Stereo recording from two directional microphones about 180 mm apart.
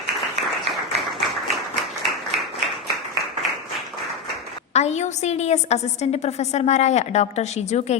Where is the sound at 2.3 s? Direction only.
35° right (ahead or behind).